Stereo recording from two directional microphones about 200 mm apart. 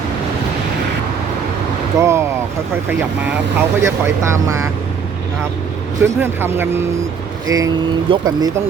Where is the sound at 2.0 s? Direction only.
15° right (ahead or behind).